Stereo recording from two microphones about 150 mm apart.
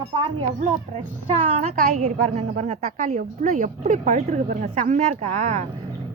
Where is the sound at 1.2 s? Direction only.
40° right (ahead or behind).